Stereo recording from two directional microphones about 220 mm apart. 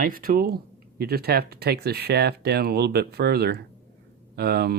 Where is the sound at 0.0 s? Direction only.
40° right (ahead or behind).